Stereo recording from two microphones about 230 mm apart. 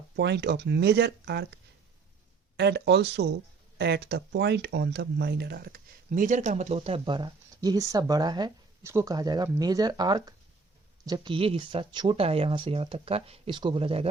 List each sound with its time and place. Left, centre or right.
0.2 s speech: right
2.6 s speech: right